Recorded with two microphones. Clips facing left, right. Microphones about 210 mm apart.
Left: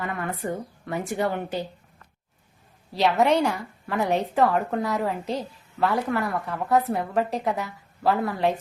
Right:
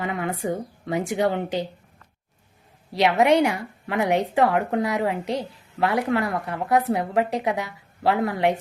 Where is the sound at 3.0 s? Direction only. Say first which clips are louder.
Right 2 dB; 15° right (ahead or behind).